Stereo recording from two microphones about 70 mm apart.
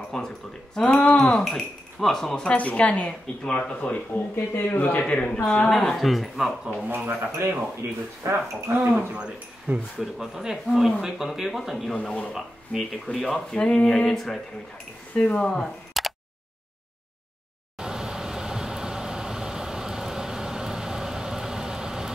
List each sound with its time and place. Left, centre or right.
0.1 s speech: centre
1.3 s speech: centre
2.7 s speech: centre
4.6 s speech: left
5.0 s speech: centre
5.8 s speech: centre
6.9 s speech: right
8.7 s speech: centre
11.9 s speech: centre
15.1 s speech: centre
16.0 s a sound: centre
17.7 s vehicle: centre